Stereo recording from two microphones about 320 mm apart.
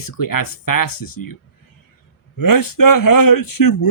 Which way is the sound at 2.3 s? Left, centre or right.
Left.